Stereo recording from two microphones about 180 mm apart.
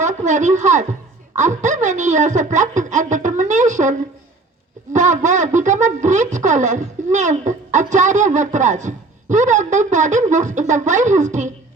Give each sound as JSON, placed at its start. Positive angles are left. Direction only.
{"t": 0.0, "sound": "speech", "side_deg": -40}